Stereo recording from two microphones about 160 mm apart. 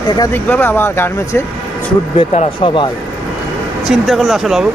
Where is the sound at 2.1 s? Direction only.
40° left (ahead or behind).